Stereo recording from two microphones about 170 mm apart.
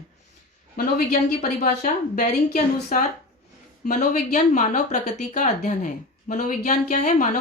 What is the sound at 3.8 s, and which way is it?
Speech, 45° left (ahead or behind).